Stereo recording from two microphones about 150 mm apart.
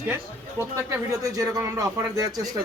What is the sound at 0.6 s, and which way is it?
Speech, 20° right (ahead or behind).